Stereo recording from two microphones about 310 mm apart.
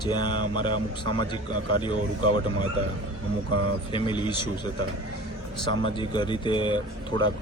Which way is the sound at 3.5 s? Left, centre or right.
Right.